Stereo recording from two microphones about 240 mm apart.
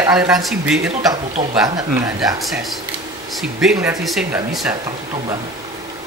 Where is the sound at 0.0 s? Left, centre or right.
Centre.